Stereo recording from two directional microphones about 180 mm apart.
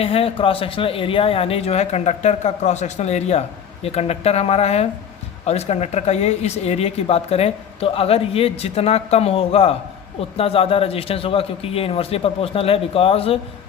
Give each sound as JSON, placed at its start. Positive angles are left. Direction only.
{"t": 0.0, "sound": "speech", "side_deg": 35}